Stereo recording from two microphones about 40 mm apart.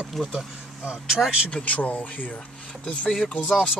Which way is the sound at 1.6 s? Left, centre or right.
Left.